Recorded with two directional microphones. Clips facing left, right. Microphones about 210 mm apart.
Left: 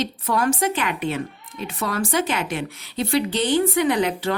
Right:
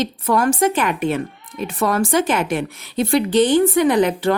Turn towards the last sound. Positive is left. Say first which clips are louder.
# right 5 dB
turn(degrees=-50)  # may be behind; listen again after turning